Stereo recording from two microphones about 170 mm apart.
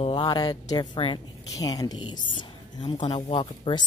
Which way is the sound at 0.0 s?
30° left (ahead or behind).